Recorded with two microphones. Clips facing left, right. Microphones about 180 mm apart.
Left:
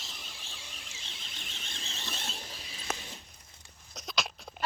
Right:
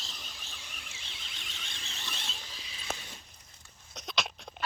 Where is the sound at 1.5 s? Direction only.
25° left (ahead or behind).